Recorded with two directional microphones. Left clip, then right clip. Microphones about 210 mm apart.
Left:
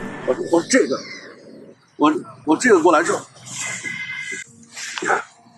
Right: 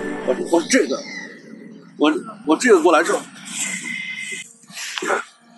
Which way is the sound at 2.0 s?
10° left (ahead or behind).